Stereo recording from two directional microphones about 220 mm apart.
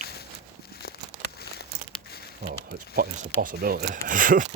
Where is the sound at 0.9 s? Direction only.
45° left (ahead or behind).